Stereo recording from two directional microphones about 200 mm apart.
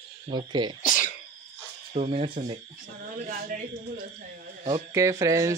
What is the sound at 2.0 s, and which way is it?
Speech, 30° right (ahead or behind).